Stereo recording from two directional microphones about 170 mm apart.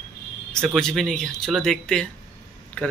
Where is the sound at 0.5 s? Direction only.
5° left (ahead or behind).